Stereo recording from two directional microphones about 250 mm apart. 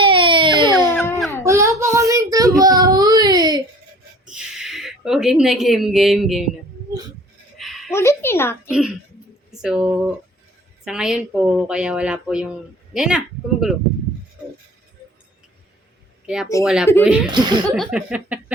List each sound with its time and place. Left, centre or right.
0.0 s baby cry: centre
0.9 s baby cry: centre
1.5 s a sound: centre
1.8 s child singing: centre
2.6 s baby cry: centre
4.3 s a woman's voice: centre
7.6 s a sound: centre
8.0 s speech: centre
8.6 s speech: centre
16.2 s speech: centre
17.3 s speech: centre
17.7 s speech: centre